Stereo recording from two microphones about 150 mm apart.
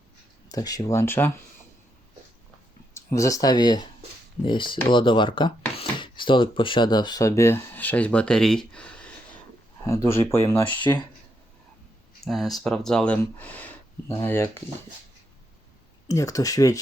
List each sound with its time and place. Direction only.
0.4 s speech: 25° left (ahead or behind)
2.9 s speech: 20° left (ahead or behind)
9.8 s speech: 20° left (ahead or behind)
12.2 s speech: centre (ahead or behind); by 14.6 s 20° left (ahead or behind)
16.0 s speech: 20° left (ahead or behind)